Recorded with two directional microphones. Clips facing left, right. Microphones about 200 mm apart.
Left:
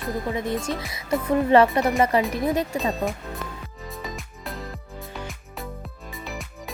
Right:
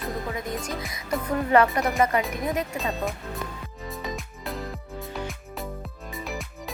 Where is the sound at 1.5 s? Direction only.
25° left (ahead or behind).